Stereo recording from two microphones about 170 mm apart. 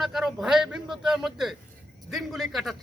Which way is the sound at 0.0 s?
Centre (ahead or behind).